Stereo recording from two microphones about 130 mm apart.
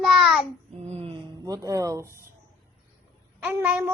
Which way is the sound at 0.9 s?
50° right (ahead or behind).